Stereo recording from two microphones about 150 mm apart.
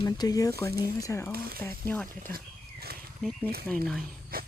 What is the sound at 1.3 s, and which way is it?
Speech, 85° right.